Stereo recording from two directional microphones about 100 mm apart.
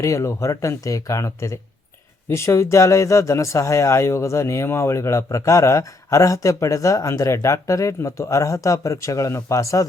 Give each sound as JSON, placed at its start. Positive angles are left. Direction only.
{"t": 0.0, "sound": "speech", "side_deg": 30}